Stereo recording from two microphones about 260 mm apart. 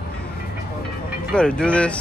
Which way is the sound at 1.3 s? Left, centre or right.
Centre.